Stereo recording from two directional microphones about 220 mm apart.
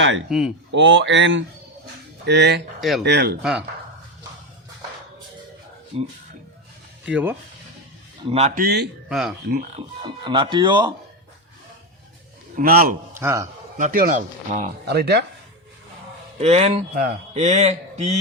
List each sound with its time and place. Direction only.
0.3 s speech: centre (ahead or behind)
0.7 s speech: 55° right (ahead or behind)
5.9 s speech: 25° right (ahead or behind)
7.0 s speech: 5° right (ahead or behind)
8.3 s speech: 30° right (ahead or behind); by 8.9 s 45° right (ahead or behind)
9.0 s speech: centre (ahead or behind)
9.7 s speech: 20° right (ahead or behind)
12.5 s speech: 40° right (ahead or behind)
13.1 s a man's voice: 10° right (ahead or behind)
13.7 s speech: 35° right (ahead or behind)
14.8 s speech: 50° right (ahead or behind)
16.4 s speech: 30° right (ahead or behind)
16.9 s speech: 45° right (ahead or behind)
17.3 s speech: 30° right (ahead or behind)